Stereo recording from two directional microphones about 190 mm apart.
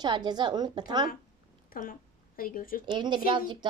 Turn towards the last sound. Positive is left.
turn(degrees=-25)  # may be behind; listen again after turning